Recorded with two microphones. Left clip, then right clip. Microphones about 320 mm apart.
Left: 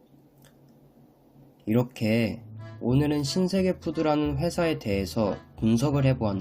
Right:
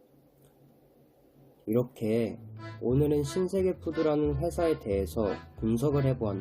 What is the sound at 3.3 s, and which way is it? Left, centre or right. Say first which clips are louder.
Speech: left 2 dB; left.